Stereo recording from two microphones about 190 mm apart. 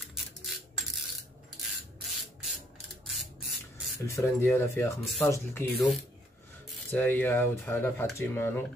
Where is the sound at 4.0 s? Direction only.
15° left (ahead or behind).